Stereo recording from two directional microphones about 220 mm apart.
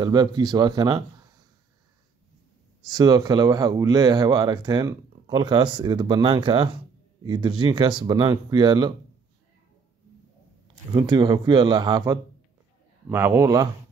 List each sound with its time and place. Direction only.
0.0 s speech: 20° right (ahead or behind)
2.9 s speech: 15° right (ahead or behind)
10.9 s speech: 20° right (ahead or behind)